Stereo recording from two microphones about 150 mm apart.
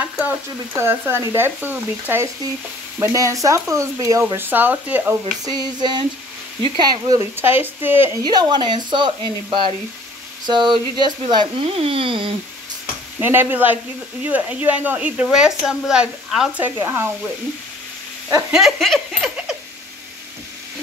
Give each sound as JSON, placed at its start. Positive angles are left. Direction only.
{"t": 0.0, "sound": "speech", "side_deg": -10}
{"t": 5.4, "sound": "speech", "side_deg": -25}
{"t": 8.2, "sound": "speech", "side_deg": -25}
{"t": 13.2, "sound": "speech", "side_deg": -15}
{"t": 18.5, "sound": "speech", "side_deg": 0}